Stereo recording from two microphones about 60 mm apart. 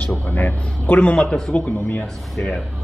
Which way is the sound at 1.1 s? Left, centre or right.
Centre.